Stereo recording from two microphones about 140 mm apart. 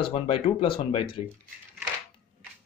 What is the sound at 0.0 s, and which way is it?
A man's voice, 40° left (ahead or behind).